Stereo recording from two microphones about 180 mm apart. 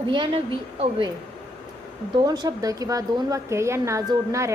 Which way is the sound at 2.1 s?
20° right (ahead or behind).